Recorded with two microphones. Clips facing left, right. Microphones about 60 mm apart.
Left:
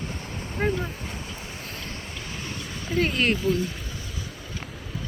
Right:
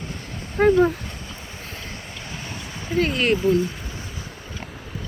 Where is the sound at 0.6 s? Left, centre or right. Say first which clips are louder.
Right 9 dB; right.